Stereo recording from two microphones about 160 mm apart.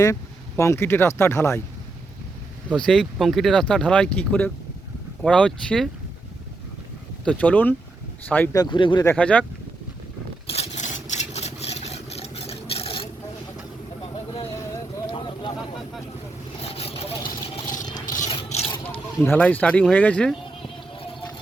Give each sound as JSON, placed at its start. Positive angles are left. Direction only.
{"t": 0.0, "sound": "speech", "side_deg": 20}
{"t": 2.7, "sound": "speech", "side_deg": 5}
{"t": 7.3, "sound": "speech", "side_deg": 10}
{"t": 8.5, "sound": "speech", "side_deg": 30}
{"t": 9.0, "sound": "speech", "side_deg": 10}
{"t": 10.5, "sound": "vehicle", "side_deg": 45}
{"t": 15.0, "sound": "a sound", "side_deg": 30}
{"t": 16.6, "sound": "vehicle", "side_deg": 40}
{"t": 18.3, "sound": "scrape", "side_deg": 40}
{"t": 19.2, "sound": "speech", "side_deg": 10}
{"t": 20.6, "sound": "music", "side_deg": 35}